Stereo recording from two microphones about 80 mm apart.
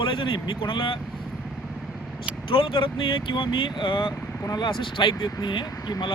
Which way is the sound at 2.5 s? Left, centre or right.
Left.